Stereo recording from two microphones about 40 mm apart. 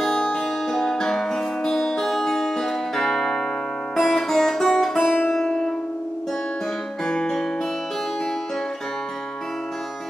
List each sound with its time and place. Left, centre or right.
0.0 s music: centre
7.1 s music: left